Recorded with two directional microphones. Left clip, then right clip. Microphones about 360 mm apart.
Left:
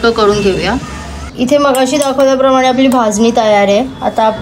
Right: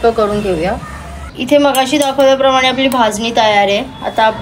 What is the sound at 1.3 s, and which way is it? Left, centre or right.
A woman's voice, left.